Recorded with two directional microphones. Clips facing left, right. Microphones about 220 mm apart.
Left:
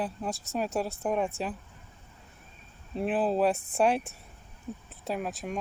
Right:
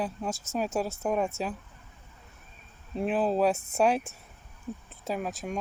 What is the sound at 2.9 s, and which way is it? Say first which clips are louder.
Speech: right 1 dB; centre (ahead or behind).